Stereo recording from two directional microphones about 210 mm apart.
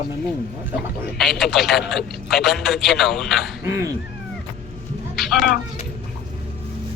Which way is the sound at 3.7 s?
15° right (ahead or behind).